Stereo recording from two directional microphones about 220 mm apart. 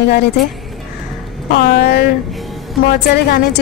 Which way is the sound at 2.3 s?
Centre (ahead or behind).